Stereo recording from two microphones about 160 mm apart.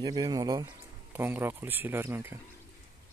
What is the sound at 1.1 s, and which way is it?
Speech, 10° right (ahead or behind).